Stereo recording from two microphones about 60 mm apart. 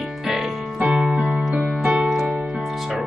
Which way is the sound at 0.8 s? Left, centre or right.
Centre.